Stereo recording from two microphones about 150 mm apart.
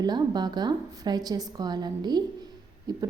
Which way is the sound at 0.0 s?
30° right (ahead or behind).